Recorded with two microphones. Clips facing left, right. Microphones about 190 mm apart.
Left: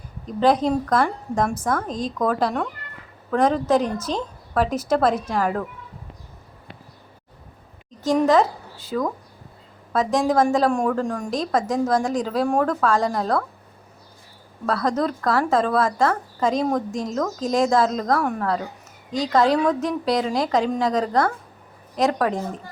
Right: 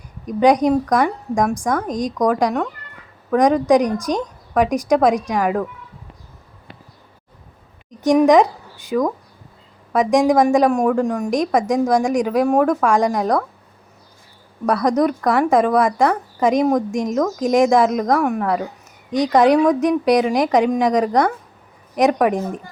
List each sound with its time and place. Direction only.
0.3 s a woman's voice: 15° right (ahead or behind)
8.0 s a woman's voice: 15° right (ahead or behind)
14.7 s a woman's voice: 15° right (ahead or behind)